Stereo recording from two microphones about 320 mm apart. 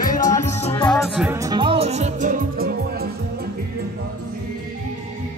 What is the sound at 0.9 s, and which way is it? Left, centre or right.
Music, centre.